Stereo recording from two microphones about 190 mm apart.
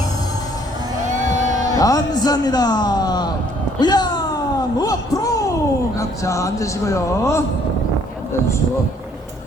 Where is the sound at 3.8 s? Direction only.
20° left (ahead or behind).